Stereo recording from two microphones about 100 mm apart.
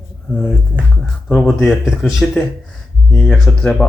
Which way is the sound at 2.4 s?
10° left (ahead or behind).